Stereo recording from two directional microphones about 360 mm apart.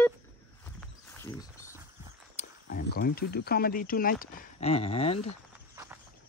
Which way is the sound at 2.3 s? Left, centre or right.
Left.